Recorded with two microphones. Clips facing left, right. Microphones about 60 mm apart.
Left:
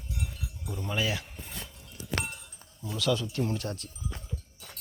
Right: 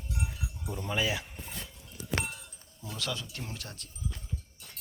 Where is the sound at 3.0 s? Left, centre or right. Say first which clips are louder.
Left 8 dB; right.